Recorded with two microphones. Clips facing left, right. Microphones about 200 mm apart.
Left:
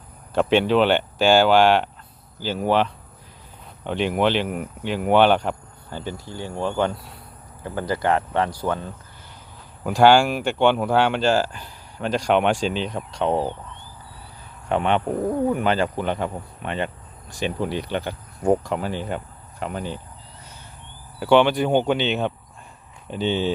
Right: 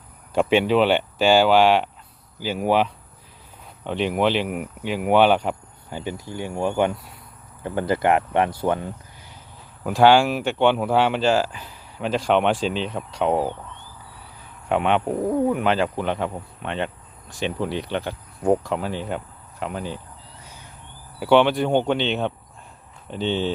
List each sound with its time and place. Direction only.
0.3 s speech: 5° right (ahead or behind)
9.8 s speech: centre (ahead or behind)
14.7 s speech: centre (ahead or behind)
21.2 s speech: centre (ahead or behind)